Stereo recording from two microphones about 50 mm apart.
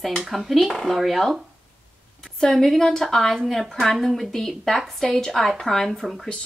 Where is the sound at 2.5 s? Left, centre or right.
Centre.